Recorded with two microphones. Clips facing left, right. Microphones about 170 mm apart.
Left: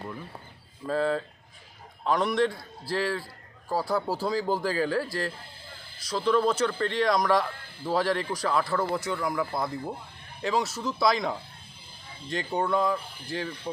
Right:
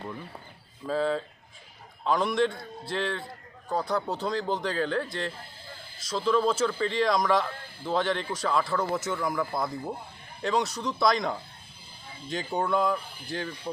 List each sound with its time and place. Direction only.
0.9 s speech: centre (ahead or behind)